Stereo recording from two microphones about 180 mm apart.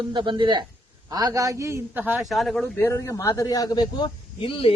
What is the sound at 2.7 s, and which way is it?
A man's voice, 15° left (ahead or behind).